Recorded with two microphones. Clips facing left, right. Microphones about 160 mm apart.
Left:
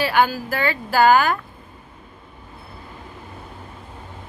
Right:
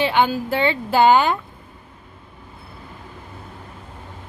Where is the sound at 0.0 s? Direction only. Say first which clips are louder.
Right 1 dB; 20° right (ahead or behind).